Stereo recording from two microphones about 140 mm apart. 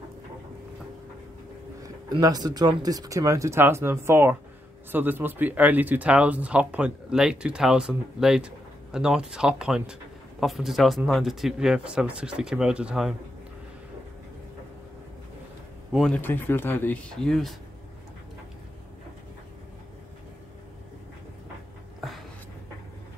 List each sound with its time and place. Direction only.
1.8 s speech: 25° right (ahead or behind); by 13.1 s 5° right (ahead or behind)
15.9 s speech: 5° left (ahead or behind)
16.2 s speech: 15° left (ahead or behind)